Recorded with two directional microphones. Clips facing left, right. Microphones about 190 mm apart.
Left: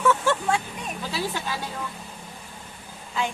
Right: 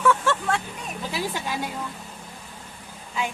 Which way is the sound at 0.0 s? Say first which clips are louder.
Even; 5° left (ahead or behind).